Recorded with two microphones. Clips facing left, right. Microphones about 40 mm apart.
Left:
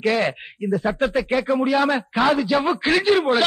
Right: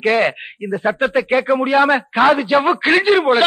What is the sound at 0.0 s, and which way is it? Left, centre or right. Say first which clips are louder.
Speech: right 5 dB; right.